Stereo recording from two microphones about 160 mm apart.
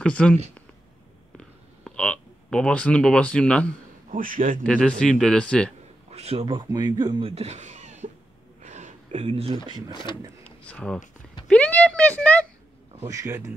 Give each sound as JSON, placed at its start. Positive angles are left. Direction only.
{"t": 0.0, "sound": "speech", "side_deg": 5}
{"t": 1.9, "sound": "speech", "side_deg": 5}
{"t": 4.1, "sound": "a man's voice", "side_deg": -55}
{"t": 4.6, "sound": "speech", "side_deg": 5}
{"t": 6.0, "sound": "speech", "side_deg": -40}
{"t": 8.6, "sound": "a sound", "side_deg": -45}
{"t": 9.7, "sound": "a man's voice", "side_deg": -25}
{"t": 10.4, "sound": "a sound", "side_deg": 5}
{"t": 11.4, "sound": "speech", "side_deg": 10}
{"t": 13.0, "sound": "a man's voice", "side_deg": -20}